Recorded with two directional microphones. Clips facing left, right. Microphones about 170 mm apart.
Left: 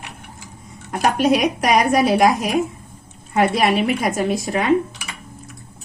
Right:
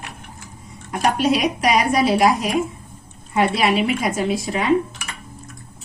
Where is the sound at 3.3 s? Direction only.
45° left (ahead or behind).